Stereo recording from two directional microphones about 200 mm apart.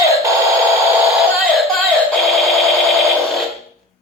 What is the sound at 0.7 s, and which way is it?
Synthetic singing, 15° right (ahead or behind).